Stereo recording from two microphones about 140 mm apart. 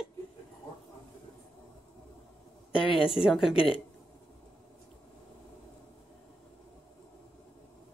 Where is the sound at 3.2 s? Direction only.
Centre (ahead or behind).